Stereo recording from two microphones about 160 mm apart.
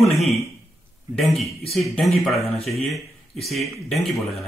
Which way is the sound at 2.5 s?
40° left (ahead or behind).